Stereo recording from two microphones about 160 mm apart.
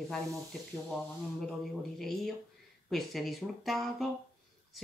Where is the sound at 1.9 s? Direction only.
Centre (ahead or behind).